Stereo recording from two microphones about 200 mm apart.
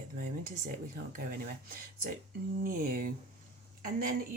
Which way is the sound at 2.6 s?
45° right (ahead or behind).